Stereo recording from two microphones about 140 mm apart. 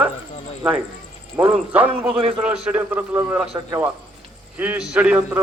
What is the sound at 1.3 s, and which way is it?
A man's voice, 10° right (ahead or behind).